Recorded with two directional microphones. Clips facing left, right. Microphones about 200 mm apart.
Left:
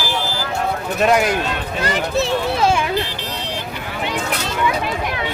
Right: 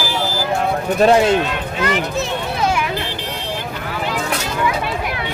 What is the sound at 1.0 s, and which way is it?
Speech, 30° right (ahead or behind).